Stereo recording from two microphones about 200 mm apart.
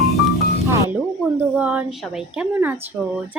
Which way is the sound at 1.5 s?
5° right (ahead or behind).